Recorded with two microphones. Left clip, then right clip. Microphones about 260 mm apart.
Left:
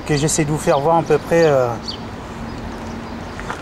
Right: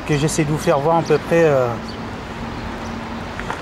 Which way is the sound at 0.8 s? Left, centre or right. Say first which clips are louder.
Left 2 dB; right.